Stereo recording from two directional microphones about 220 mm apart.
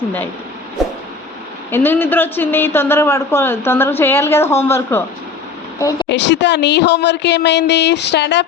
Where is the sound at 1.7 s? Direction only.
10° left (ahead or behind).